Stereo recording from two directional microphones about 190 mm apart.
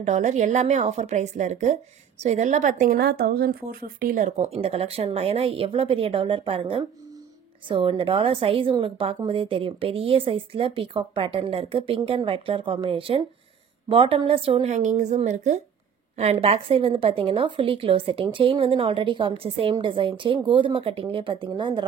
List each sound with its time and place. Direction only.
0.0 s a woman's voice: 40° right (ahead or behind)